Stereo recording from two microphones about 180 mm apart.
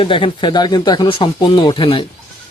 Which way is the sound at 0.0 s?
30° left (ahead or behind).